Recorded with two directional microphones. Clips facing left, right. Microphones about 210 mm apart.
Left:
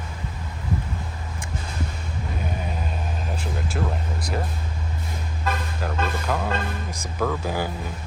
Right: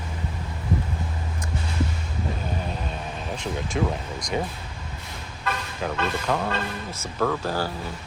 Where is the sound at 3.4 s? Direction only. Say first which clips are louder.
Right 5 dB; 5° left (ahead or behind).